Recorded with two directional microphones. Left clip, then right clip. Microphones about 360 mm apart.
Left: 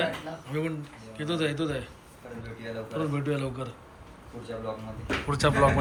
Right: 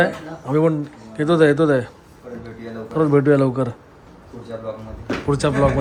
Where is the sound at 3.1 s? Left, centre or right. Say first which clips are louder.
Right 16 dB; right.